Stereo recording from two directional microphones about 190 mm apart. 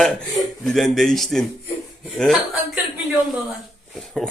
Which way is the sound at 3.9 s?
Centre (ahead or behind).